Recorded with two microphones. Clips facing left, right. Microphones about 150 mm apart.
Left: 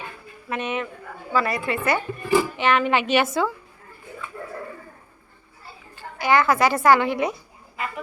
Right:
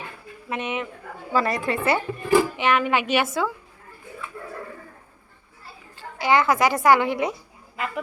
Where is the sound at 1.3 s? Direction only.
40° right (ahead or behind).